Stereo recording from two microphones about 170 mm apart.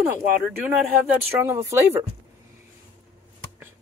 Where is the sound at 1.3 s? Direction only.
15° right (ahead or behind).